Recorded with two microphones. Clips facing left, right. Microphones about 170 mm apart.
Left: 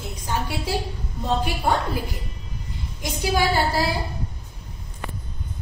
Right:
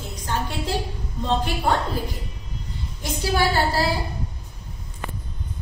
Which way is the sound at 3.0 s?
15° left (ahead or behind).